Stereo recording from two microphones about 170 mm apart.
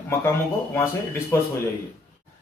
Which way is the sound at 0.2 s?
15° left (ahead or behind).